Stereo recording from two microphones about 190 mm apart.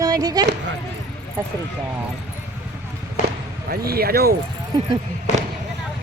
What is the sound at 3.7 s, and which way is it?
Speech, 55° right (ahead or behind).